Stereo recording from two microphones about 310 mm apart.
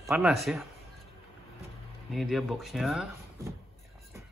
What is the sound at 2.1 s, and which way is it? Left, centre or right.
Speech, centre.